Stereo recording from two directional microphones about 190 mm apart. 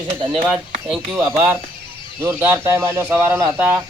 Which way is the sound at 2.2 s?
10° right (ahead or behind).